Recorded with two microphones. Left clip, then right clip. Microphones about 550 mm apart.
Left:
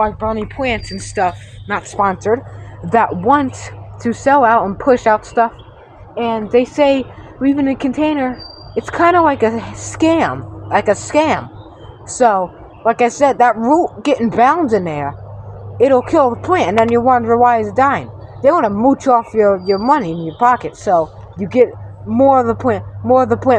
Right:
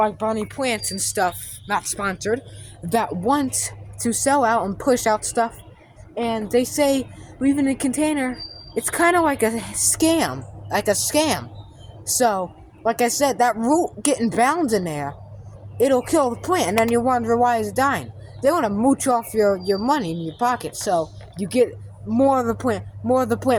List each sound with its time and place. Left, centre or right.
0.0 s speech: right
4.0 s speech: right